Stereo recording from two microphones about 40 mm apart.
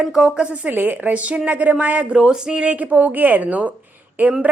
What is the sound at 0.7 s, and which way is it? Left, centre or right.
Speech, right.